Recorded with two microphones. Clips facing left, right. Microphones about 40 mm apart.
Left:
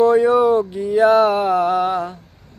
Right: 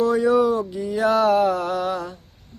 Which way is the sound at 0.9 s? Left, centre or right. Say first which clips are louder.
Left 4 dB; left.